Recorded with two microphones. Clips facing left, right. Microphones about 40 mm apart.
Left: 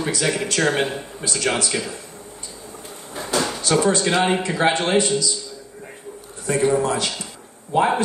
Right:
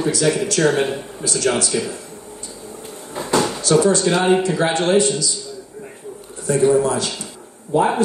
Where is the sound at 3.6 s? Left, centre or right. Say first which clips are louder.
Right 3 dB; left.